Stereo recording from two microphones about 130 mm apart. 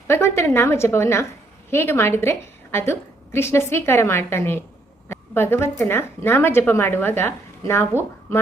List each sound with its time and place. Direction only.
0.1 s a woman's voice: 20° left (ahead or behind)
7.9 s speech: 15° right (ahead or behind)